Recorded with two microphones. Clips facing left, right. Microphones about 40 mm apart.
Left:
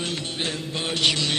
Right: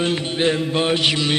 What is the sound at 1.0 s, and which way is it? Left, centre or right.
Mantra, centre.